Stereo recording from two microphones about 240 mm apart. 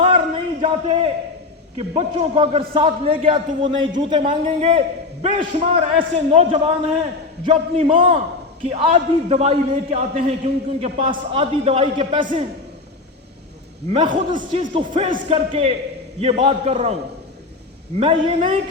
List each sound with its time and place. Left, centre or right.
0.3 s a sound: right
1.9 s a man's voice: right
13.9 s a man's voice: centre
14.3 s a man's voice: right
18.0 s a man's voice: right